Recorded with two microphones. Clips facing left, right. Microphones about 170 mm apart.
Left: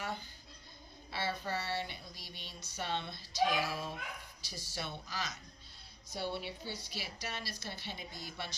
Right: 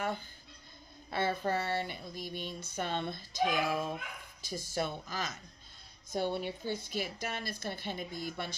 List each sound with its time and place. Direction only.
1.1 s speech: 50° right (ahead or behind)